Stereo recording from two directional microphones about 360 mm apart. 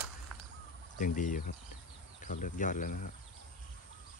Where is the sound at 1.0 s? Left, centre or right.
Left.